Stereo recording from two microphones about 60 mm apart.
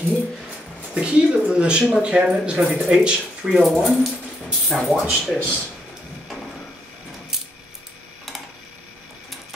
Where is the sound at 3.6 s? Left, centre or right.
Centre.